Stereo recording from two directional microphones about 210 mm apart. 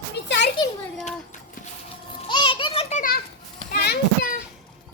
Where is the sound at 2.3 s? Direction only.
25° left (ahead or behind).